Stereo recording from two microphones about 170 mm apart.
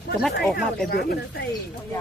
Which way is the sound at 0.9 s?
65° left (ahead or behind).